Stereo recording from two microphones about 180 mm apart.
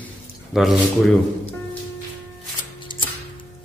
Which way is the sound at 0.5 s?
Centre (ahead or behind).